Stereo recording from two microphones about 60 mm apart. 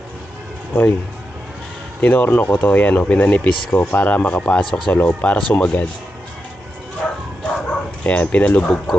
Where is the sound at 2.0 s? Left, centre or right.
Left.